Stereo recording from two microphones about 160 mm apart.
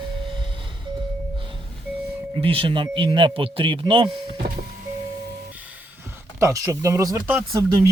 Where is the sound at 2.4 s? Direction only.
35° right (ahead or behind).